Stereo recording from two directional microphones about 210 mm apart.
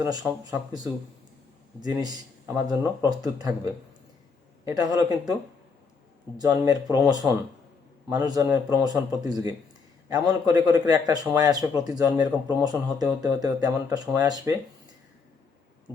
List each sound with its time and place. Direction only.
0.0 s speech: 15° right (ahead or behind)
1.8 s a man's voice: 20° right (ahead or behind)
4.6 s speech: 15° right (ahead or behind)
6.3 s speech: 15° right (ahead or behind)